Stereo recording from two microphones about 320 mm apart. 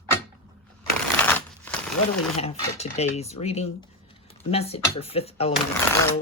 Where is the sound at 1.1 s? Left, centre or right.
Centre.